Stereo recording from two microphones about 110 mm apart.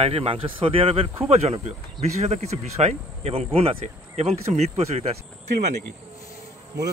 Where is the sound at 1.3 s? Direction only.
70° right (ahead or behind).